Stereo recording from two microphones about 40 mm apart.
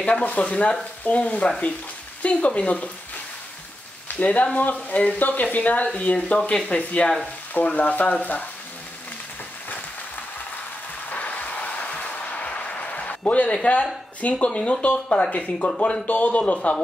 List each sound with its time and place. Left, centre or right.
0.2 s speech: left
4.2 s speech: left
5.9 s speech: left
7.5 s speech: left
11.1 s a sound: left
14.2 s speech: left